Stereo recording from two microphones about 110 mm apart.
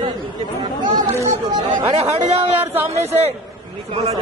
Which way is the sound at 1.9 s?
75° right (ahead or behind).